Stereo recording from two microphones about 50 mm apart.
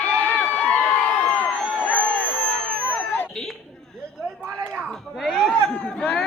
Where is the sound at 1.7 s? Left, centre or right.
Left.